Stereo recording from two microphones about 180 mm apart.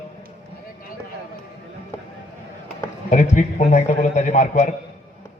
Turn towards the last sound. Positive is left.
turn(degrees=40)  # may be behind; listen again after turning